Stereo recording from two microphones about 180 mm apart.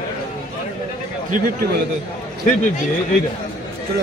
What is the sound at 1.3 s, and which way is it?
Speech, 55° right (ahead or behind).